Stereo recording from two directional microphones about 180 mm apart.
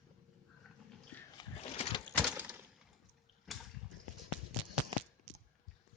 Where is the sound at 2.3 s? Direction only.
10° right (ahead or behind).